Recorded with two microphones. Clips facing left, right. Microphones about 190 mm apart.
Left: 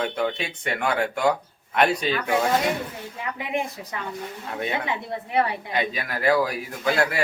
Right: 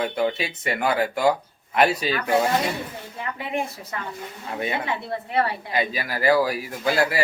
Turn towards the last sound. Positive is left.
turn(degrees=-5)  # may be behind; listen again after turning